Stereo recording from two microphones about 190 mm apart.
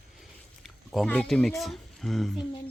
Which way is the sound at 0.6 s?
Centre (ahead or behind).